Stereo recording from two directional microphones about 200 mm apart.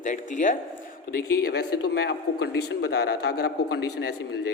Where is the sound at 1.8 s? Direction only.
55° left (ahead or behind).